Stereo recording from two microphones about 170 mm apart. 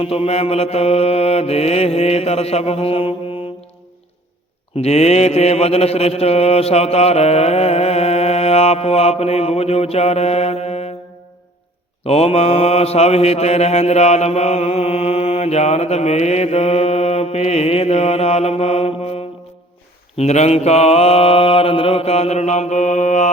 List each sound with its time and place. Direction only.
0.0 s mantra: 35° left (ahead or behind)
4.8 s mantra: 40° left (ahead or behind)
12.0 s mantra: 35° left (ahead or behind)
20.1 s mantra: 40° left (ahead or behind)